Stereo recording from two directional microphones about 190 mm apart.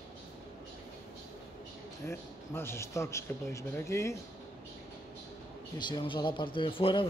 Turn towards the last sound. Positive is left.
turn(degrees=25)  # may be behind; listen again after turning